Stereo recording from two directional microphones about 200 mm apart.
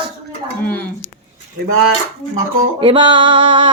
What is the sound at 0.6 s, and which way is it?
Speech, 10° left (ahead or behind).